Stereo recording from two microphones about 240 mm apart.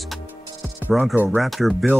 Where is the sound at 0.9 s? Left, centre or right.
Centre.